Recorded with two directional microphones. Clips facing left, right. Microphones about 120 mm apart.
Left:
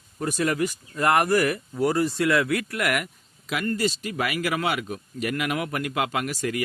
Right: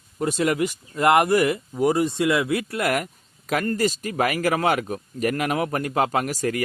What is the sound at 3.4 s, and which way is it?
Speech, 45° right (ahead or behind).